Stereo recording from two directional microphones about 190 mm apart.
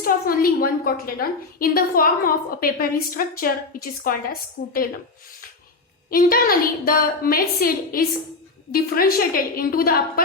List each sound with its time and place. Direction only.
0.0 s a woman's voice: 50° left (ahead or behind)
6.1 s a woman's voice: 50° left (ahead or behind)